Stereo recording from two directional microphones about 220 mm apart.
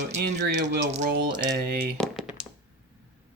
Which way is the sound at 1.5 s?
45° right (ahead or behind).